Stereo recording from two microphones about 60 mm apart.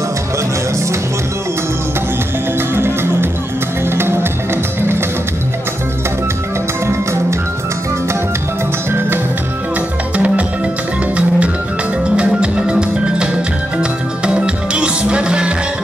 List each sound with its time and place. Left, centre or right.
2.7 s music: right
10.1 s music: right